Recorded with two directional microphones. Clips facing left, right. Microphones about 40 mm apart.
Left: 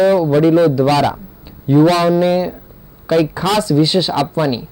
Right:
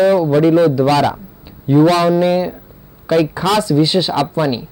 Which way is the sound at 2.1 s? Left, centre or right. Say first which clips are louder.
Even; centre.